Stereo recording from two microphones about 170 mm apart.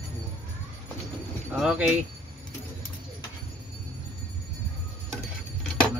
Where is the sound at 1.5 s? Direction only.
5° right (ahead or behind).